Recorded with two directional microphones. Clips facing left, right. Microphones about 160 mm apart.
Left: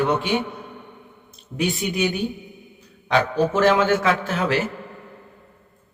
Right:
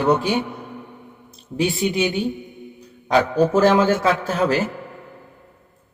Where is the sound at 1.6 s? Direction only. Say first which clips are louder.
Right 3 dB; 25° right (ahead or behind).